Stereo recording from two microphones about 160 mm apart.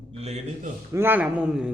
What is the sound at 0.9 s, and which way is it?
Speech, 15° right (ahead or behind).